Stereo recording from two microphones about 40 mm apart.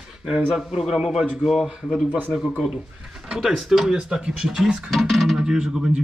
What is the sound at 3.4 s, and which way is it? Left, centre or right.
Speech, centre.